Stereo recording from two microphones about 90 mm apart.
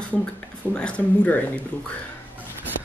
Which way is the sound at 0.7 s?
10° left (ahead or behind).